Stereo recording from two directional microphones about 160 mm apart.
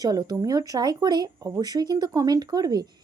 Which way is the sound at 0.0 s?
25° right (ahead or behind).